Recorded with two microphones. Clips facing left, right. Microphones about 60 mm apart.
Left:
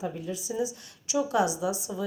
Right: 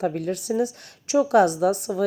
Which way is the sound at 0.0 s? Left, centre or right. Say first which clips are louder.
Right 8 dB; right.